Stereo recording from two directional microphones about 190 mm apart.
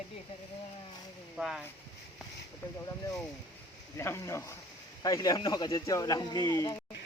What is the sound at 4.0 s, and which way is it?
Speech, 15° left (ahead or behind).